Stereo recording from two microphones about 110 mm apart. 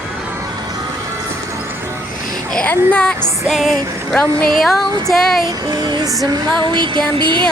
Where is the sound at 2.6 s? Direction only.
10° left (ahead or behind).